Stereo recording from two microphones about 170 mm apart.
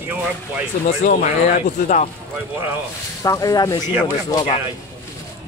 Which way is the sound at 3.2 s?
20° left (ahead or behind).